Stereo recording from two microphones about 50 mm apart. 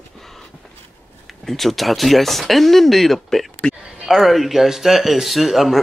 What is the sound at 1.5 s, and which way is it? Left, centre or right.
Speech, centre.